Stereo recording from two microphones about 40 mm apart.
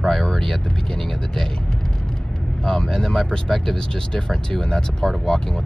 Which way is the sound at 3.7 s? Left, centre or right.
Centre.